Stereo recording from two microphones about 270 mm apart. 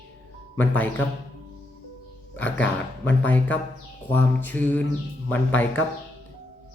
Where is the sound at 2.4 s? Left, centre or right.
Centre.